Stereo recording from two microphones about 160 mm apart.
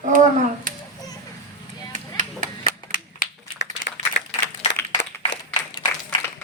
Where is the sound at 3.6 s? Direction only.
90° left.